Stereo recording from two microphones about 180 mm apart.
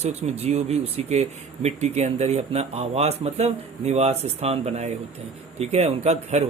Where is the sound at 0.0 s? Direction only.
35° right (ahead or behind).